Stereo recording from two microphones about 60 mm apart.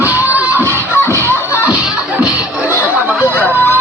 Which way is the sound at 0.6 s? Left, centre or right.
Right.